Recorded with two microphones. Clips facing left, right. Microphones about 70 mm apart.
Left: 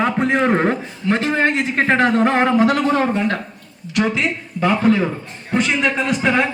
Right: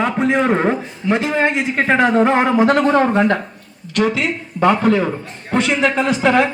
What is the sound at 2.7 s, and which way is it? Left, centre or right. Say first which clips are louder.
Speech: right 3 dB; right.